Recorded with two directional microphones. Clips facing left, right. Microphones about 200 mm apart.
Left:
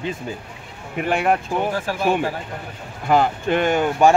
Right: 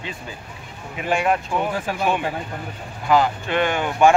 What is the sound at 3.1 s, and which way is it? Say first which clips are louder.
Speech: left 1 dB; 50° left (ahead or behind).